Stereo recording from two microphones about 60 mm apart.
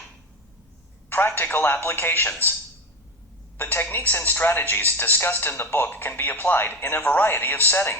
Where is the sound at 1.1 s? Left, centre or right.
Left.